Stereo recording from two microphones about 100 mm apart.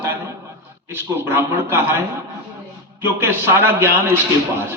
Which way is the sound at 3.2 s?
25° right (ahead or behind).